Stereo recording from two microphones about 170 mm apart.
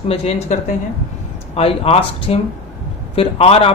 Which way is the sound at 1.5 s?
35° left (ahead or behind).